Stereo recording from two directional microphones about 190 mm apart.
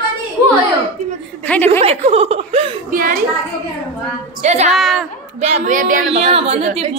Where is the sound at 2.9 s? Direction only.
45° right (ahead or behind).